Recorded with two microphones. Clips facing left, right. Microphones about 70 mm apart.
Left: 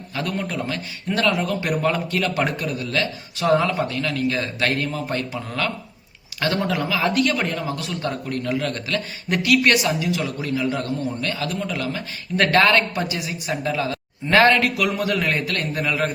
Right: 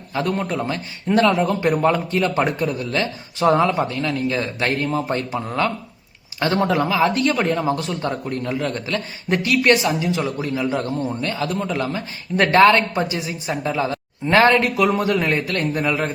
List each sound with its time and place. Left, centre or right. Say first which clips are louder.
0.1 s speech: right 4 dB; right